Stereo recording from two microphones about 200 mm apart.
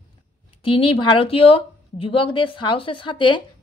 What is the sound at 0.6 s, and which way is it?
A woman's voice, 25° left (ahead or behind).